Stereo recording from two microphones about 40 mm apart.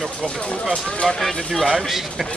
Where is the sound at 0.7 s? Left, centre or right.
Left.